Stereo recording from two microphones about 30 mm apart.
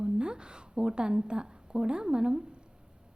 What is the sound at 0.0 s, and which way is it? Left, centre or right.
A woman's voice, right.